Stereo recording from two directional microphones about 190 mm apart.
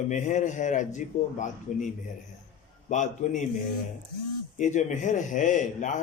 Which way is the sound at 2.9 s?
40° left (ahead or behind).